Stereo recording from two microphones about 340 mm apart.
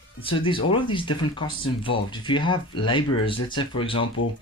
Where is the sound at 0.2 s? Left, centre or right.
Centre.